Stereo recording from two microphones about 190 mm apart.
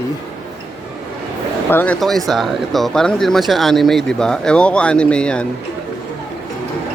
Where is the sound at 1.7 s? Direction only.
10° left (ahead or behind).